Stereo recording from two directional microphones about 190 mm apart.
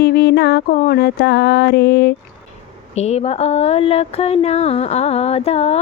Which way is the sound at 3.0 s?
35° left (ahead or behind).